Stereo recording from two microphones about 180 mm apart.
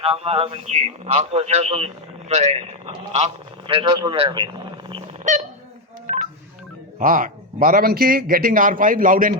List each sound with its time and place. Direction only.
0.0 s a man's voice: 30° right (ahead or behind)
5.3 s a man's voice: 40° right (ahead or behind)
6.1 s telephone dialing: 50° right (ahead or behind)
7.0 s a man's voice: 50° right (ahead or behind)